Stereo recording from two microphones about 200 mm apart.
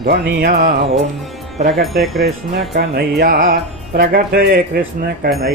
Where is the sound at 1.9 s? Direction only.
Centre (ahead or behind).